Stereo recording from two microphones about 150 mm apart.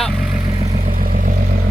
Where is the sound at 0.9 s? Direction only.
65° right (ahead or behind).